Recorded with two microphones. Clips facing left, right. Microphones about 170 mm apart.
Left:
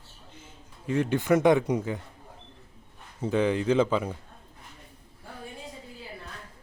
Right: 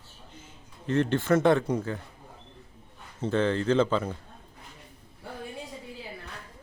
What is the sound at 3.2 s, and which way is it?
Speech, 10° left (ahead or behind).